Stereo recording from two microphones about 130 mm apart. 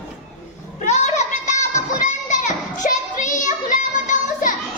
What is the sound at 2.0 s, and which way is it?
Children playing, 70° left (ahead or behind).